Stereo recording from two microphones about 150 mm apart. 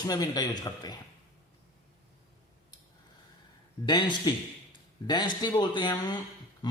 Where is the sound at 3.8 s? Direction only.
30° left (ahead or behind).